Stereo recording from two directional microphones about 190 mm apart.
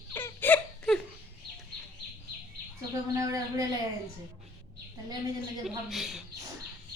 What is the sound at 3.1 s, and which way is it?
Speech, 20° right (ahead or behind).